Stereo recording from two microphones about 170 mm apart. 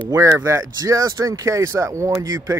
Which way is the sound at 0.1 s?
15° right (ahead or behind).